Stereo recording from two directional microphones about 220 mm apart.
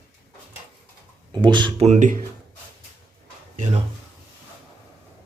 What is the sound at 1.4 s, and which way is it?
Speech, 20° right (ahead or behind).